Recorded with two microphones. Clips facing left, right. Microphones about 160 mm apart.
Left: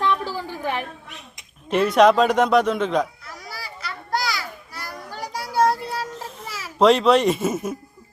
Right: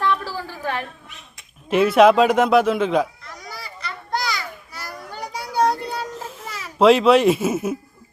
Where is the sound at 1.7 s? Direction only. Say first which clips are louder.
Right 2 dB; 5° right (ahead or behind).